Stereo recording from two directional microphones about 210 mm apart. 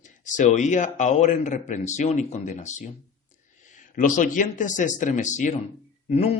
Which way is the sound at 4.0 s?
40° left (ahead or behind).